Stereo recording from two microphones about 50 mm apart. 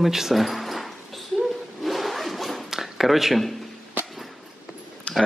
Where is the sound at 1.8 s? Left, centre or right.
Centre.